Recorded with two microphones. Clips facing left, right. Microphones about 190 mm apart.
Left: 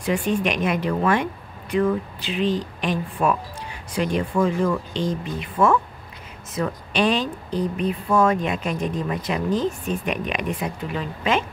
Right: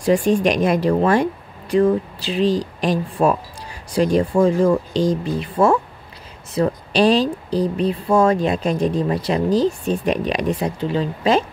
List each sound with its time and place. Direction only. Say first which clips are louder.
0.0 s speech: right 6 dB; 35° right (ahead or behind)